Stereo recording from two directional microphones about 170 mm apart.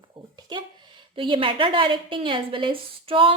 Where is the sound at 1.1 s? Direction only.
30° right (ahead or behind).